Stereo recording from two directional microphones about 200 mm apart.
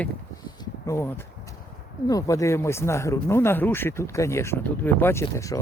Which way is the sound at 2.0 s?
15° left (ahead or behind).